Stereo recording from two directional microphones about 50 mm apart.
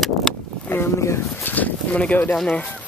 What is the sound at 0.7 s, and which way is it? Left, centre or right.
Speech, left.